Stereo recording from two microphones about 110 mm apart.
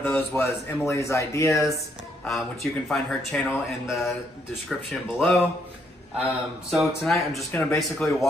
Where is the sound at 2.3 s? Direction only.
Centre (ahead or behind).